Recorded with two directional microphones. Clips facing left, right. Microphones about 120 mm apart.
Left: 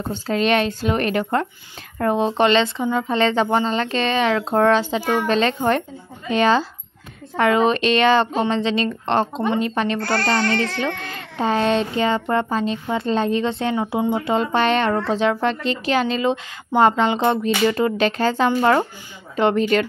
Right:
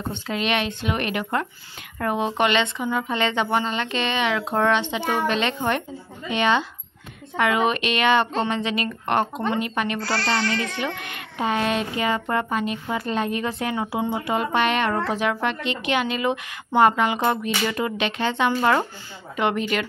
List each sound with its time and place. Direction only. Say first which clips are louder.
0.1 s speech: left 7 dB; 40° left (ahead or behind)
9.9 s speech: left 4 dB; 50° left (ahead or behind)
11.0 s speech: left 3 dB; 30° left (ahead or behind)